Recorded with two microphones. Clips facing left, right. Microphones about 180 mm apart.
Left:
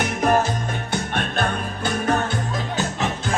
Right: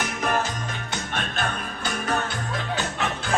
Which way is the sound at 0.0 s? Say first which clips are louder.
Left 6 dB; 50° left (ahead or behind).